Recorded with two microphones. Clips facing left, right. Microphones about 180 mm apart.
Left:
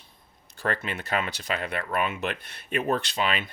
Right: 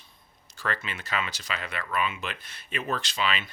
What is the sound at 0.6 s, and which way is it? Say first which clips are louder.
Speech: left 4 dB; 55° left (ahead or behind).